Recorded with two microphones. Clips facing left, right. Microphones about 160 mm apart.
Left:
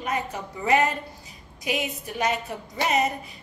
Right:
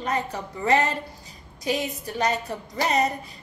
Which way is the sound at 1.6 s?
35° right (ahead or behind).